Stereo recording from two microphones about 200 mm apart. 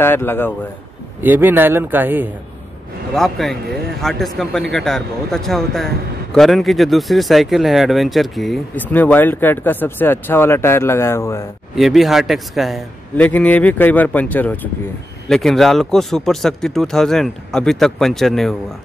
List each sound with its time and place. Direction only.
0.0 s speech: 10° left (ahead or behind)
1.2 s speech: 10° right (ahead or behind)
3.2 s speech: centre (ahead or behind)
11.7 s speech: centre (ahead or behind)